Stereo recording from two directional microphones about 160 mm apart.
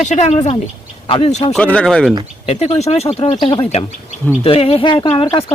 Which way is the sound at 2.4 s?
45° left (ahead or behind).